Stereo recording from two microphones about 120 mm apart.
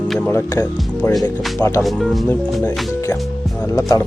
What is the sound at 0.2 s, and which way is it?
Speech, 20° left (ahead or behind).